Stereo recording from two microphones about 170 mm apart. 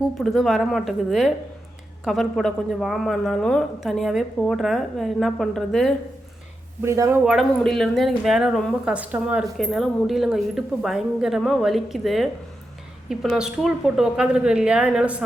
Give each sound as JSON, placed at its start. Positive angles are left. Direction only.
{"t": 0.2, "sound": "speech", "side_deg": 0}
{"t": 6.8, "sound": "speech", "side_deg": -15}
{"t": 7.3, "sound": "speech", "side_deg": 0}